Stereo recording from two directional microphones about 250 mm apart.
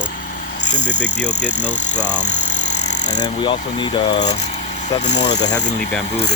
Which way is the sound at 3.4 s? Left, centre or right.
Centre.